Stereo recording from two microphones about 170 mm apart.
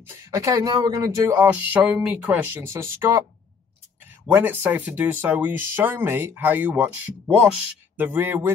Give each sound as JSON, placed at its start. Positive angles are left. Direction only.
{"t": 0.1, "sound": "speech", "side_deg": -15}
{"t": 4.3, "sound": "speech", "side_deg": -10}